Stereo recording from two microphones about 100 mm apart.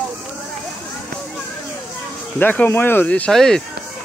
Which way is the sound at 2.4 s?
20° left (ahead or behind).